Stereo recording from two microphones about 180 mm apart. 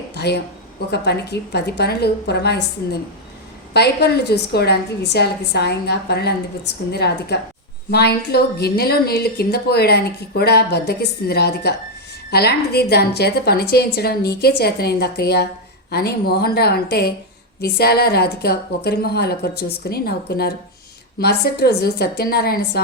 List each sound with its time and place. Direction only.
0.1 s a sound: 65° left (ahead or behind)
0.9 s a woman's voice: 65° left (ahead or behind)
3.8 s speech: 65° left (ahead or behind)